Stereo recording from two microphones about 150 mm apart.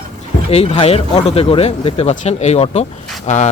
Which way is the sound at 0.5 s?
40° left (ahead or behind).